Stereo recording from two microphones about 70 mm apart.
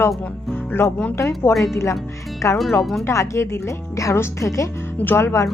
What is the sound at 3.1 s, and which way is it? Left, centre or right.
Speech, left.